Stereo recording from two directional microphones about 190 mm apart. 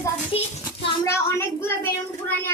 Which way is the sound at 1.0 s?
15° left (ahead or behind).